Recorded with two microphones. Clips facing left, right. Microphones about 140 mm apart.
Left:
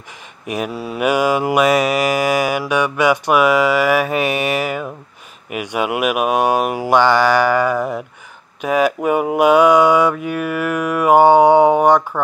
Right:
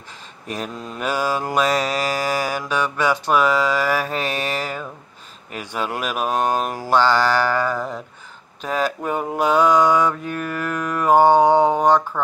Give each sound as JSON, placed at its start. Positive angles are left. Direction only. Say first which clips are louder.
{"t": 0.5, "sound": "mantra", "louder": "left 6 dB", "side_deg": 10}